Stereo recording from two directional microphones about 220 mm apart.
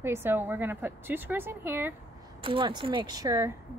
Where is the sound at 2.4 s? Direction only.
25° right (ahead or behind).